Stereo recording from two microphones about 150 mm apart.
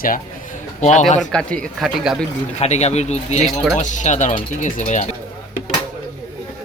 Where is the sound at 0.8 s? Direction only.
55° left (ahead or behind).